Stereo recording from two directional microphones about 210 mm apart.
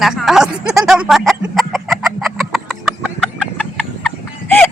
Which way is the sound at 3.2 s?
5° left (ahead or behind).